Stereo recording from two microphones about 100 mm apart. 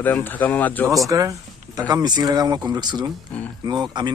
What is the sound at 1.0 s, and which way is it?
Speech, 35° right (ahead or behind).